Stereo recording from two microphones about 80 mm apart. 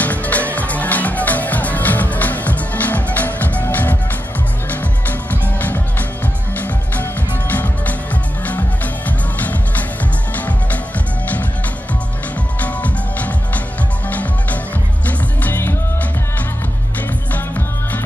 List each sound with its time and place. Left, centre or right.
0.0 s music: centre
5.3 s music: left
9.4 s music: left
12.6 s music: centre
15.0 s music: left